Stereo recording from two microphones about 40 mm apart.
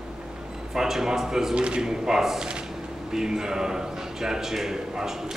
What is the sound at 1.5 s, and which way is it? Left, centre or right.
Speech, right.